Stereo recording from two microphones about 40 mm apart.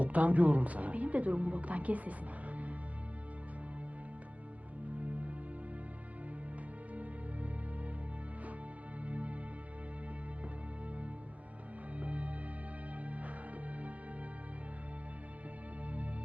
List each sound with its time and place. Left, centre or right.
0.0 s a woman's voice: right
4.9 s music: right
6.9 s music: right
9.0 s music: right
11.9 s music: right